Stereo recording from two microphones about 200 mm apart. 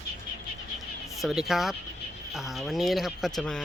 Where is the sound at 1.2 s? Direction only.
Centre (ahead or behind).